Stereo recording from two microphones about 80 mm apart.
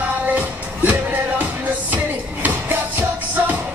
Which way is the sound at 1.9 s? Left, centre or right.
Right.